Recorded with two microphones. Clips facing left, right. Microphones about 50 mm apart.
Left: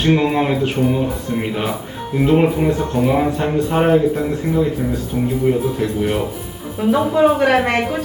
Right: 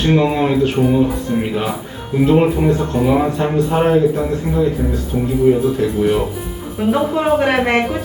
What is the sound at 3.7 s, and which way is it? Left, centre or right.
Speech, centre.